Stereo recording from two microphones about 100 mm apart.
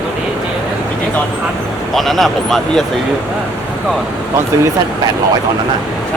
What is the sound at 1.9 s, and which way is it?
Speech, centre (ahead or behind).